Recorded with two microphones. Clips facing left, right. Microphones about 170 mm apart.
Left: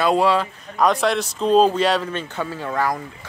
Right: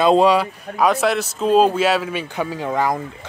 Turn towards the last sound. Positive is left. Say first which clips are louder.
# right 3 dB
turn(degrees=-20)  # may be behind; listen again after turning